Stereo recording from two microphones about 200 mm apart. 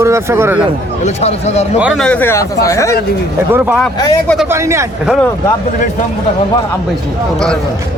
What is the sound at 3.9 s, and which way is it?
Speech, 20° left (ahead or behind).